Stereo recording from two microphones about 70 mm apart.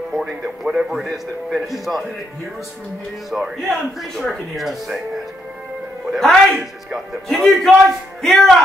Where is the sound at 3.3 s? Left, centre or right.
Centre.